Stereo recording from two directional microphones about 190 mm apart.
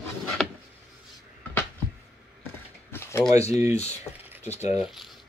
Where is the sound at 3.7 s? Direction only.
35° left (ahead or behind).